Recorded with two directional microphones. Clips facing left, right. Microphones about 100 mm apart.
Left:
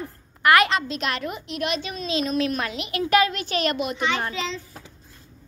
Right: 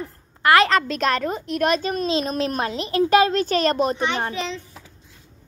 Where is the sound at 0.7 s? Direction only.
50° right (ahead or behind); by 4.4 s 25° right (ahead or behind).